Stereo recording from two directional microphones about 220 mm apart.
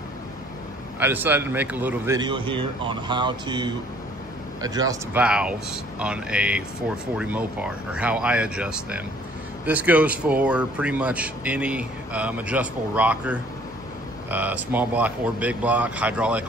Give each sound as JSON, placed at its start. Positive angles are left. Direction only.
{"t": 0.9, "sound": "speech", "side_deg": -10}
{"t": 5.2, "sound": "speech", "side_deg": -5}